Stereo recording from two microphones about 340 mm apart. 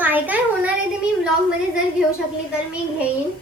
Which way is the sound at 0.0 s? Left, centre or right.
Centre.